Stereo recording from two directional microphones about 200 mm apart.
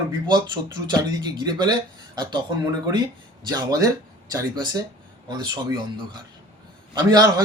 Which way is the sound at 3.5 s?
20° right (ahead or behind).